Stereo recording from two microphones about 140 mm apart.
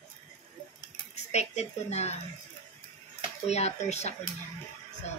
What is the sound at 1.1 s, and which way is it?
Speech, 50° left (ahead or behind).